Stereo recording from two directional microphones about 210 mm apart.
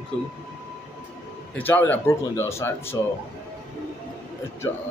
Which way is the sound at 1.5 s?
10° left (ahead or behind).